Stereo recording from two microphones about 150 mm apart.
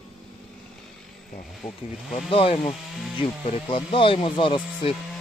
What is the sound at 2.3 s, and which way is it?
Speech, 35° left (ahead or behind).